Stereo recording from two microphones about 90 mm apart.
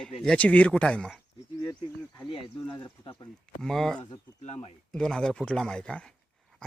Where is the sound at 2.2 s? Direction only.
75° left (ahead or behind).